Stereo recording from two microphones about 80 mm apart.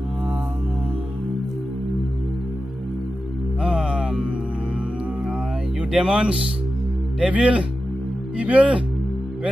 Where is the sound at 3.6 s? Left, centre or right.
Centre.